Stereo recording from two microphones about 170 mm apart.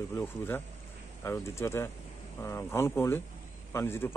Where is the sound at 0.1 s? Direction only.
15° left (ahead or behind).